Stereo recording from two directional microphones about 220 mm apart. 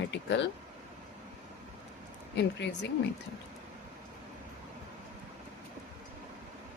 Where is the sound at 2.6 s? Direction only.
50° left (ahead or behind).